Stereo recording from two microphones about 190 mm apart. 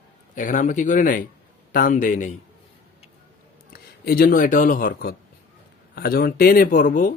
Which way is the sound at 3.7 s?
50° left (ahead or behind).